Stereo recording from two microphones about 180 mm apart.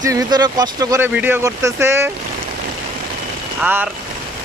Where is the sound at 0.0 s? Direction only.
20° right (ahead or behind).